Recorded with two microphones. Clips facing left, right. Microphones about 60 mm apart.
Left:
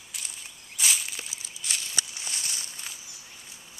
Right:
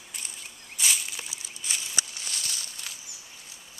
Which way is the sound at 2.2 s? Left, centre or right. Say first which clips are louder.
Even; left.